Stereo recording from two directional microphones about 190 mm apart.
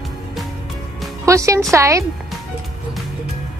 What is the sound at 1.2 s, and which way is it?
Speech, 15° right (ahead or behind).